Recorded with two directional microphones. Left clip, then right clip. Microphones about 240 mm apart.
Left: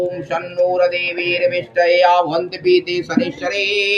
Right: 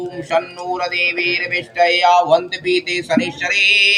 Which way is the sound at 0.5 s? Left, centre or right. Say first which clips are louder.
Left 4 dB; right.